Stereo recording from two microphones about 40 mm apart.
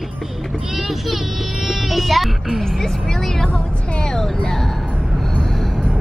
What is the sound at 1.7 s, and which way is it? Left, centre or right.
Speech, centre.